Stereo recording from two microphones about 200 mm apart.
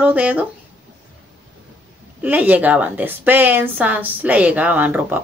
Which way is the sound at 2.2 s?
10° right (ahead or behind).